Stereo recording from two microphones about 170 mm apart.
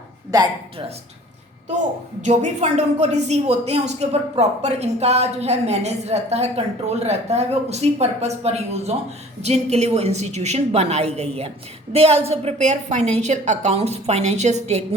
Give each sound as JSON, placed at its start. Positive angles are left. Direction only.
{"t": 0.3, "sound": "speech", "side_deg": -20}
{"t": 2.2, "sound": "a woman's voice", "side_deg": -40}